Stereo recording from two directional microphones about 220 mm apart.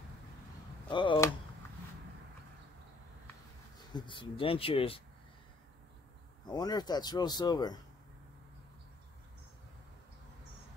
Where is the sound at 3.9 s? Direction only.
20° left (ahead or behind).